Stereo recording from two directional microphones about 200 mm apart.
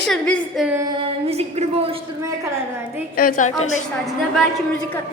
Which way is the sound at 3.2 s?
45° left (ahead or behind).